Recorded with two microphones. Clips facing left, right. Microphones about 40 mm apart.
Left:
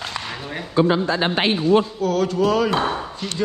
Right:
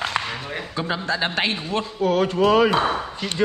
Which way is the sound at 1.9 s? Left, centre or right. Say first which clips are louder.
Even; right.